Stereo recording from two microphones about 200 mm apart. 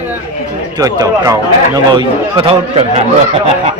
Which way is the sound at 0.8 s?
15° right (ahead or behind).